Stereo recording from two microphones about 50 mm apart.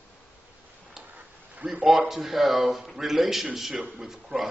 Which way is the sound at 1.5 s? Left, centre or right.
Right.